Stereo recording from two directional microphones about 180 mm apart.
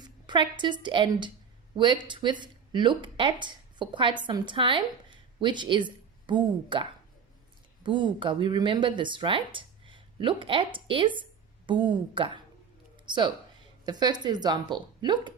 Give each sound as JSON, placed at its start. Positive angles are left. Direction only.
{"t": 0.0, "sound": "a woman's voice", "side_deg": -25}
{"t": 7.9, "sound": "a woman's voice", "side_deg": -25}